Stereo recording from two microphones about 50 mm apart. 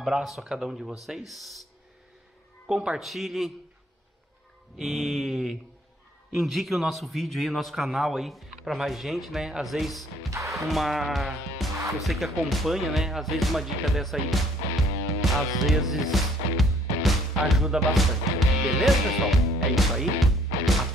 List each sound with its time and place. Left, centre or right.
0.0 s a man's voice: centre
2.7 s speech: centre
3.0 s a man's voice: centre
4.7 s a man's voice: centre
10.3 s music: right
10.7 s a man's voice: centre
15.2 s music: centre